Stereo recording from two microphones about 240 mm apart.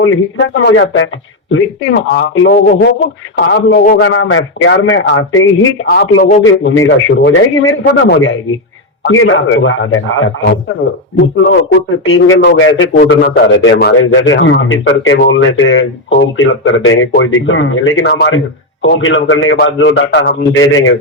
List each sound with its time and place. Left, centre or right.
0.0 s a man's voice: left
5.9 s a man's voice: left
6.4 s a man's voice: left